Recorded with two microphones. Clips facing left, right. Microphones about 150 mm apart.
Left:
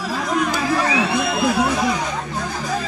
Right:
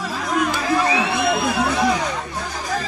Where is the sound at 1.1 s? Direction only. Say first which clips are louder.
Left 1 dB; centre (ahead or behind).